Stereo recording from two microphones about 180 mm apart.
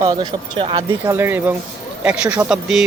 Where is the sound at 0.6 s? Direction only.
30° right (ahead or behind).